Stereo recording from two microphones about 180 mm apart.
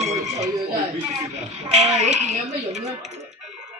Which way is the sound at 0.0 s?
40° right (ahead or behind).